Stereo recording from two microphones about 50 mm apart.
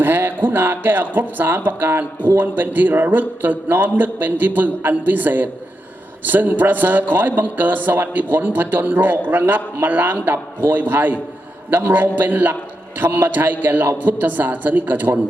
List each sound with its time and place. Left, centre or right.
0.0 s a man's voice: right